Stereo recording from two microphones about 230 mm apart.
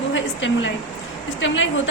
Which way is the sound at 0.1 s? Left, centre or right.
Left.